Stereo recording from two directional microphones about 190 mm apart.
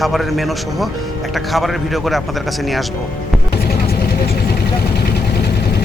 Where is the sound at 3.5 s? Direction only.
55° left (ahead or behind).